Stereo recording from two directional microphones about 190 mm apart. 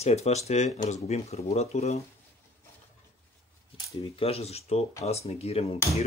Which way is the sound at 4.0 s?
30° left (ahead or behind).